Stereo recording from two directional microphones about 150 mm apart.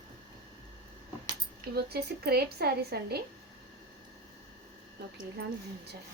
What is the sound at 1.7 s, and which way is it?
A woman's voice, 90° right.